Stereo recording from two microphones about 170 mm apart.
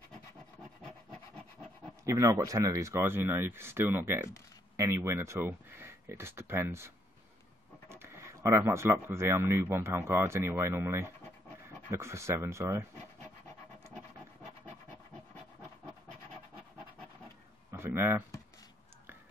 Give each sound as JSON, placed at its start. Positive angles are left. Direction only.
{"t": 0.1, "sound": "rub", "side_deg": 5}
{"t": 2.0, "sound": "speech", "side_deg": -20}
{"t": 7.9, "sound": "speech", "side_deg": -15}
{"t": 17.6, "sound": "a sound", "side_deg": -15}